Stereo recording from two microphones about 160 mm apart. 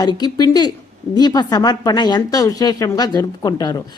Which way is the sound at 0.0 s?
25° left (ahead or behind).